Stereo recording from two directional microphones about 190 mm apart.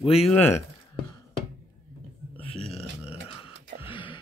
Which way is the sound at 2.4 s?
30° left (ahead or behind).